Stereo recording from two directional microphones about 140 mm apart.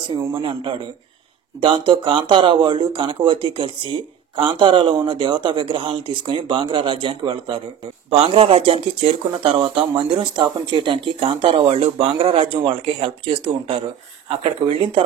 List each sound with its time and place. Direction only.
0.3 s speech: 35° right (ahead or behind)